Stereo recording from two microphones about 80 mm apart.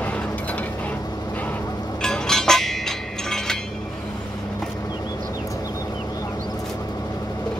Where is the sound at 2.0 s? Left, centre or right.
Centre.